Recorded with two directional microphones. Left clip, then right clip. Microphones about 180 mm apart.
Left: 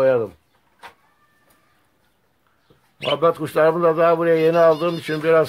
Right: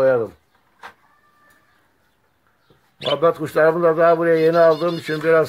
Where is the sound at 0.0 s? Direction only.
Centre (ahead or behind).